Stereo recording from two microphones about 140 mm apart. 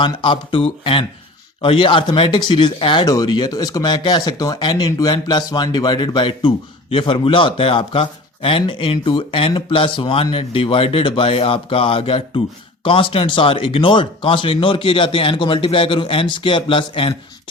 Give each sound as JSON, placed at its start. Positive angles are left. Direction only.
{"t": 0.0, "sound": "speech", "side_deg": 35}